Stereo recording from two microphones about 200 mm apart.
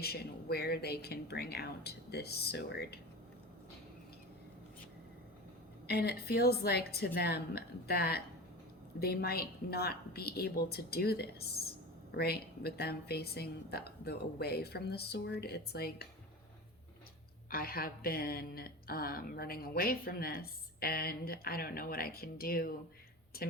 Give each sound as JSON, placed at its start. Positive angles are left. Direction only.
{"t": 0.0, "sound": "speech", "side_deg": 50}
{"t": 5.9, "sound": "speech", "side_deg": 50}
{"t": 17.5, "sound": "speech", "side_deg": 50}